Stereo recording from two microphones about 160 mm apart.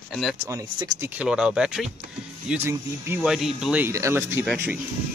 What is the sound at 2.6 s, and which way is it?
Speech, 15° right (ahead or behind).